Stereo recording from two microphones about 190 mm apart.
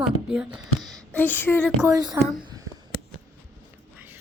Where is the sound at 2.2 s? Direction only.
15° right (ahead or behind).